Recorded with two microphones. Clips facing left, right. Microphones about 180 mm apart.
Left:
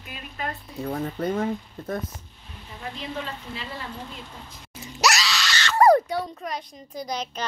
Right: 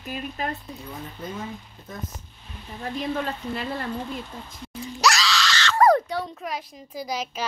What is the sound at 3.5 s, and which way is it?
Speech, 55° right (ahead or behind).